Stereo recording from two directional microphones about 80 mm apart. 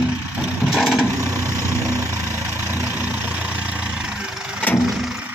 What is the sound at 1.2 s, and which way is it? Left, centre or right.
Vehicle, right.